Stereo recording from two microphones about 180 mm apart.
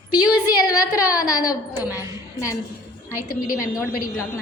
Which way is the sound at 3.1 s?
10° right (ahead or behind).